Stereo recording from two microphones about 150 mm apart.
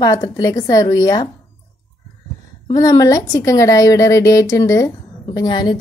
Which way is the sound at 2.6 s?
25° left (ahead or behind).